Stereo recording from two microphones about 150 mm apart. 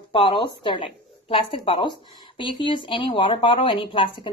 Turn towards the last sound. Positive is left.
turn(degrees=35)  # may be behind; listen again after turning